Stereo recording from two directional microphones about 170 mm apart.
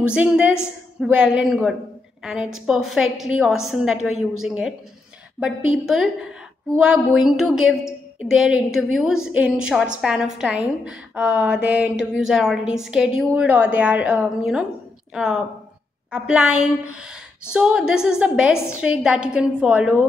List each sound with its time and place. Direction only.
0.1 s a woman's voice: 5° right (ahead or behind)